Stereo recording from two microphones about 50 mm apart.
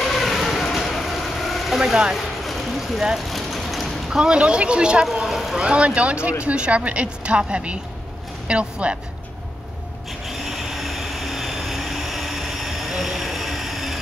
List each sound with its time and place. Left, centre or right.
0.0 s vehicle: centre
2.1 s a sound: centre
3.3 s vehicle: centre
4.1 s a woman's voice: centre
5.0 s speech: centre
5.6 s a woman's voice: right
10.2 s vehicle: centre